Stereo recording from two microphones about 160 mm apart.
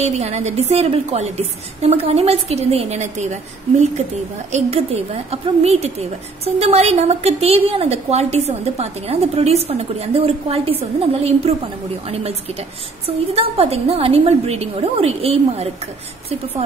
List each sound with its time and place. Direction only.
0.0 s a woman's voice: 45° right (ahead or behind)
4.5 s a woman's voice: 40° right (ahead or behind)